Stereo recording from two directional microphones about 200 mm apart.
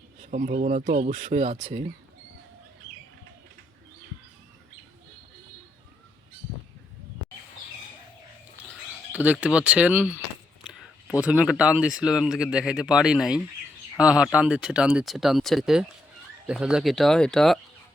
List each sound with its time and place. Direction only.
0.2 s speech: 35° right (ahead or behind)
9.1 s speech: 5° right (ahead or behind)
11.2 s speech: 5° right (ahead or behind)